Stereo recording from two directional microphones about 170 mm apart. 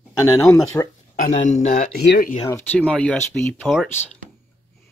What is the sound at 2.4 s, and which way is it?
Speech, 15° left (ahead or behind).